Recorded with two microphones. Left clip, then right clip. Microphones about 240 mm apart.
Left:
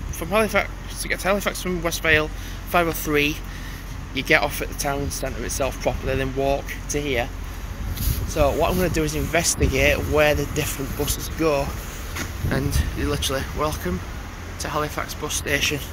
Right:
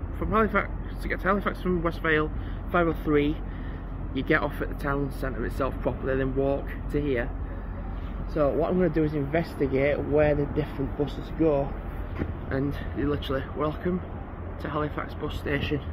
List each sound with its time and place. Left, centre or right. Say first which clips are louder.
0.3 s speech: left 4 dB; centre
8.4 s speech: left 4 dB; centre